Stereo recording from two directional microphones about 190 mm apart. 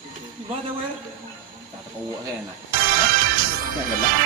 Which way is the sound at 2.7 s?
50° right (ahead or behind).